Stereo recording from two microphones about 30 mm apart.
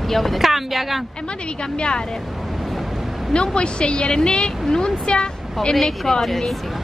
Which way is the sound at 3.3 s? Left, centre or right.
Left.